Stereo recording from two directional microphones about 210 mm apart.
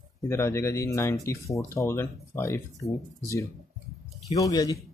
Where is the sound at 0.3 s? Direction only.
10° left (ahead or behind).